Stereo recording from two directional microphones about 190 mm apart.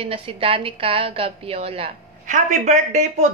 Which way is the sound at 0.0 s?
30° right (ahead or behind).